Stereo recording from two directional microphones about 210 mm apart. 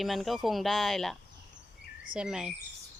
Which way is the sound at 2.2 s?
5° right (ahead or behind).